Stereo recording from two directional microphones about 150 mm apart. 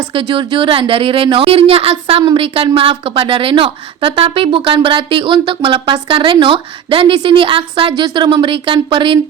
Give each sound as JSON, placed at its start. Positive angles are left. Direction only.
{"t": 0.1, "sound": "a woman's voice", "side_deg": -35}